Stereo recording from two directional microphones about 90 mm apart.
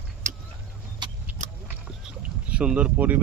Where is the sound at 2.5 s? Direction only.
15° right (ahead or behind).